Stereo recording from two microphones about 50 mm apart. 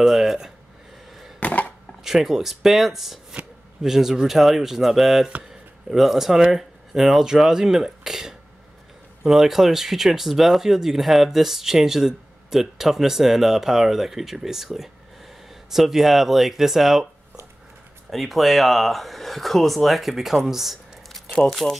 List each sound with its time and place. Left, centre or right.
0.0 s speech: centre
1.4 s a sound: left
2.0 s speech: centre
18.1 s speech: centre
20.4 s a sound: centre
21.6 s speech: centre